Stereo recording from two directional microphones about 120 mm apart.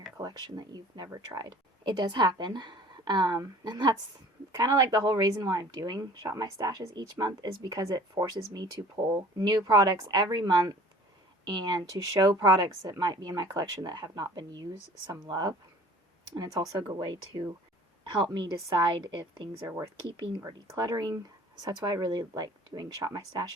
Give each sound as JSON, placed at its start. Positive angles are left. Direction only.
{"t": 0.2, "sound": "speech", "side_deg": -35}
{"t": 20.1, "sound": "speech", "side_deg": -40}